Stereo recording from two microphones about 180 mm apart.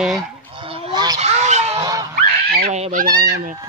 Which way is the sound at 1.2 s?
40° right (ahead or behind).